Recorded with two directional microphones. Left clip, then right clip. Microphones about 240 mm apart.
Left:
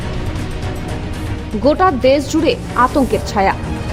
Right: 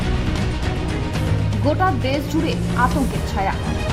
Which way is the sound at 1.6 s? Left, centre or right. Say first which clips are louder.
Left 8 dB; left.